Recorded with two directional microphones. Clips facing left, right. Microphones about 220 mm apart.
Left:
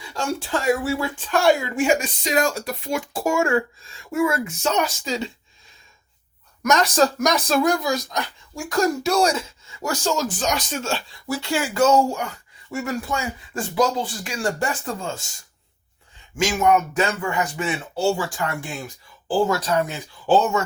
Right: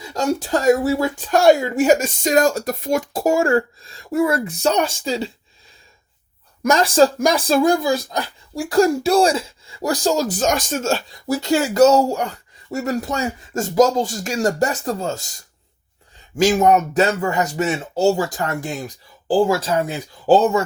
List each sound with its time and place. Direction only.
0.0 s speech: 40° right (ahead or behind)
6.6 s speech: 30° right (ahead or behind)
16.4 s speech: 35° right (ahead or behind)
19.3 s speech: 25° right (ahead or behind)